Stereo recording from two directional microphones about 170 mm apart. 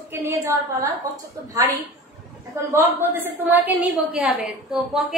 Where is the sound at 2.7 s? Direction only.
15° right (ahead or behind).